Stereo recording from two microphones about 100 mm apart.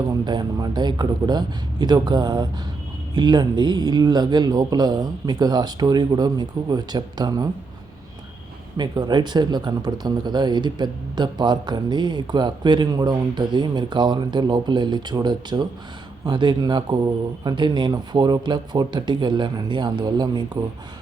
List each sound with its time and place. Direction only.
0.1 s speech: 45° right (ahead or behind)
8.8 s speech: 45° right (ahead or behind)